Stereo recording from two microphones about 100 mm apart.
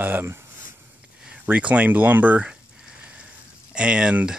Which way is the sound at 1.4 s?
15° right (ahead or behind).